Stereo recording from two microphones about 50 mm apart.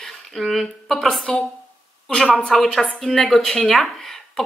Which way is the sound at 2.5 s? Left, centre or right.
Centre.